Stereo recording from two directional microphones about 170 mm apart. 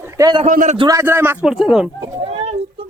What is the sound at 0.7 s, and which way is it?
Speech, 20° right (ahead or behind).